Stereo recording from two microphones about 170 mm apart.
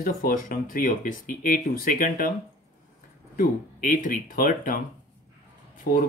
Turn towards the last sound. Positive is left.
turn(degrees=60)  # may be behind; listen again after turning